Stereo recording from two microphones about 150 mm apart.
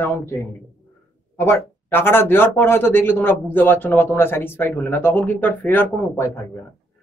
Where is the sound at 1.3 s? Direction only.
15° left (ahead or behind).